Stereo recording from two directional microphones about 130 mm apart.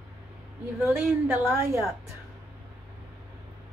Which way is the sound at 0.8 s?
15° right (ahead or behind).